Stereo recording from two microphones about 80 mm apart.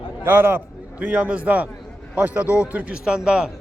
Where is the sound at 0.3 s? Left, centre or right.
Right.